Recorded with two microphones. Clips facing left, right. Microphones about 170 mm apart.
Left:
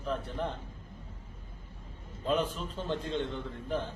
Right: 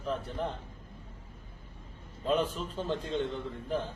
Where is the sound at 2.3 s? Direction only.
40° right (ahead or behind).